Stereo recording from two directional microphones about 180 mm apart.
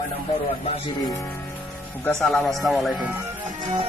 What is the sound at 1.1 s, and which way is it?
Speech, 15° left (ahead or behind).